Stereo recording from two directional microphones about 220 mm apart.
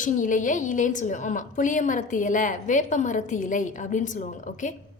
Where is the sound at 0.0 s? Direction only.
35° left (ahead or behind).